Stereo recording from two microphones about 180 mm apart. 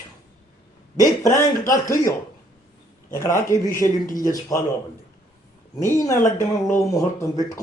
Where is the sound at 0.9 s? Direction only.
20° left (ahead or behind).